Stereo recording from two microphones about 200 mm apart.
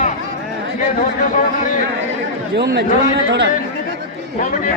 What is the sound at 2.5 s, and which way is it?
Speech, 55° right (ahead or behind).